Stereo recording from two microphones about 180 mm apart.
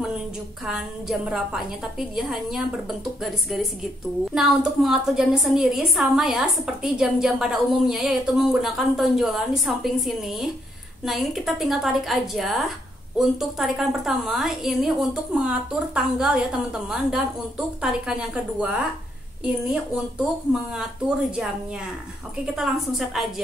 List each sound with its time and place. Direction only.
0.7 s a woman's voice: centre (ahead or behind)
22.6 s a woman's voice: centre (ahead or behind)